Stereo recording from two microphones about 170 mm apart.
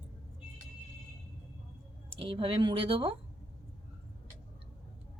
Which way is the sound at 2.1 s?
30° right (ahead or behind).